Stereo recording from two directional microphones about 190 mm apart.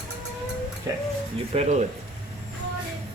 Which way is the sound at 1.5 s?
30° right (ahead or behind).